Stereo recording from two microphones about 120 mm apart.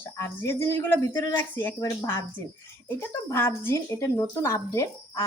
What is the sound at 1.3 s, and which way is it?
Speech, 15° left (ahead or behind).